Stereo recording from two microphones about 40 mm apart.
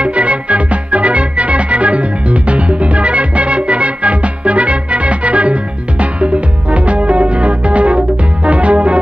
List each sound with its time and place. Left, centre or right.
0.0 s music: right